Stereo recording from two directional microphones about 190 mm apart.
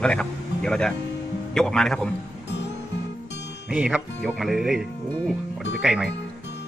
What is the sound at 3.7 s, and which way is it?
Speech, 5° right (ahead or behind).